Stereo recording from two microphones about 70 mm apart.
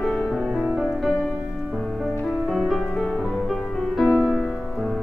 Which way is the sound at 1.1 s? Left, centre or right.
Centre.